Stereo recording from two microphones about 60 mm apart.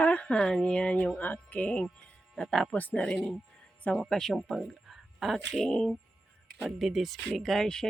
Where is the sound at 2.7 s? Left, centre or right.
Left.